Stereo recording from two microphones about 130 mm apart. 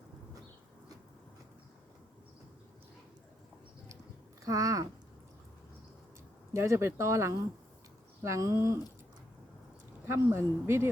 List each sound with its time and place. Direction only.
4.4 s speech: 25° right (ahead or behind)
6.5 s speech: 20° right (ahead or behind)
10.1 s speech: 20° right (ahead or behind)